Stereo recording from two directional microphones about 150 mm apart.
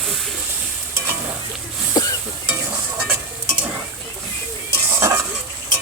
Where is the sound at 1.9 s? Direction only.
25° left (ahead or behind).